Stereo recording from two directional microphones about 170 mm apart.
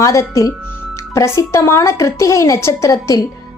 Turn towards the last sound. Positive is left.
turn(degrees=20)  # may be behind; listen again after turning